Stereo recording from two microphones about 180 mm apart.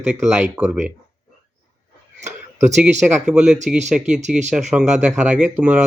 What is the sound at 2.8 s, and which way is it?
Speech, 5° right (ahead or behind).